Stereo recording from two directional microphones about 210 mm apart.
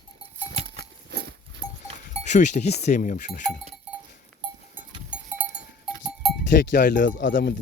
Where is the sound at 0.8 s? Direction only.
55° right (ahead or behind).